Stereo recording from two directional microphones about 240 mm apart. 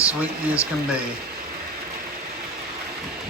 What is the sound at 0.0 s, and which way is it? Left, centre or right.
Speech, centre.